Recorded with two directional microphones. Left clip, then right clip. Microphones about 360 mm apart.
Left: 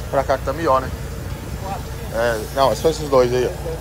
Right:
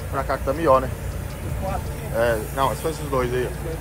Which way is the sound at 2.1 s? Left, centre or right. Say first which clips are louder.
Left 3 dB; centre.